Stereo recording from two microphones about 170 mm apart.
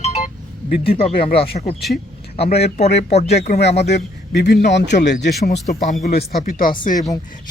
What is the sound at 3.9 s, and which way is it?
A man's voice, 80° left.